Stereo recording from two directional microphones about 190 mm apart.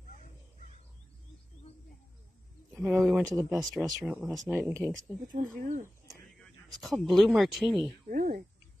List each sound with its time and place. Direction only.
2.7 s speech: 5° right (ahead or behind)
5.3 s speech: 45° right (ahead or behind)
6.8 s speech: centre (ahead or behind)
8.1 s speech: 50° right (ahead or behind)